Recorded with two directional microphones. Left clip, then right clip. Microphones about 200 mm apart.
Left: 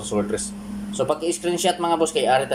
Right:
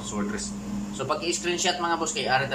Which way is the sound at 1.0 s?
30° left (ahead or behind).